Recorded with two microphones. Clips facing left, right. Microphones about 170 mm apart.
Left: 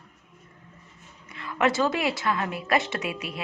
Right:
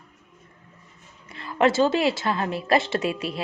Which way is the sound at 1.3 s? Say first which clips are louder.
Right 4 dB; 30° right (ahead or behind).